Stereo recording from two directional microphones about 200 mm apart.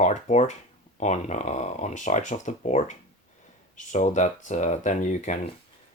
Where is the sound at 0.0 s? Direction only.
35° left (ahead or behind).